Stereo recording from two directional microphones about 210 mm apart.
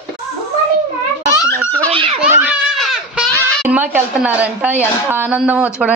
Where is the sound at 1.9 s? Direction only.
25° right (ahead or behind).